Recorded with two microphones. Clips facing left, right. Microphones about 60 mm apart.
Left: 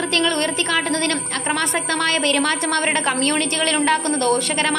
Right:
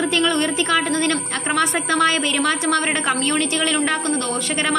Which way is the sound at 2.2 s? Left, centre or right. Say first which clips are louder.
Left 1 dB; centre.